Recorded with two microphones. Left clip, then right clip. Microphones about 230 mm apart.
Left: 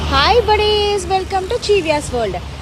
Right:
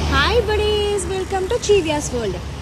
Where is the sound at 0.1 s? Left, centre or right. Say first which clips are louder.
Left 5 dB; centre.